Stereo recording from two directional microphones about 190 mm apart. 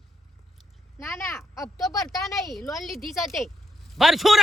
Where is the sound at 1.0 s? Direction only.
15° left (ahead or behind).